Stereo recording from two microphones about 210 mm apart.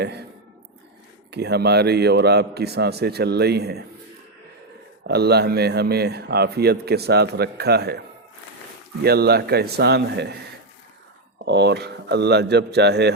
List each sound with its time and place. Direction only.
1.3 s a man's voice: 50° right (ahead or behind)
5.0 s a man's voice: 50° right (ahead or behind)
9.0 s a man's voice: 50° right (ahead or behind)
11.4 s a man's voice: 55° right (ahead or behind)